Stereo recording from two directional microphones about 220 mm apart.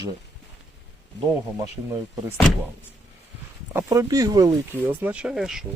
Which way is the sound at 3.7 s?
15° right (ahead or behind).